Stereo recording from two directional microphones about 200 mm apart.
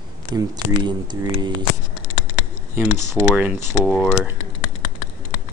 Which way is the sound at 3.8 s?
Centre (ahead or behind).